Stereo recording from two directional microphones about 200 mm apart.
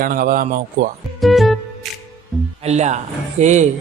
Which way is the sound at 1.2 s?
Centre (ahead or behind).